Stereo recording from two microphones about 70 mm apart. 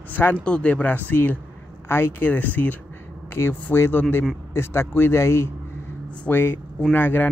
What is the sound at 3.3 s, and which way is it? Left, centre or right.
A man's voice, left.